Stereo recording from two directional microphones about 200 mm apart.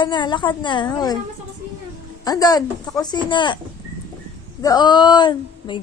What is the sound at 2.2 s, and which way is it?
A woman's voice, 20° left (ahead or behind).